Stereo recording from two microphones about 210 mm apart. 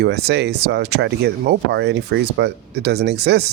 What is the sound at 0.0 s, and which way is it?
Speech, 50° right (ahead or behind).